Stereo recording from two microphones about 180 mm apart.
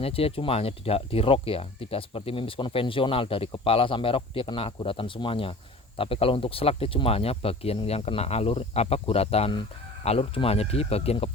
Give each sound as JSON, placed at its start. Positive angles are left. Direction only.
{"t": 0.0, "sound": "speech", "side_deg": 30}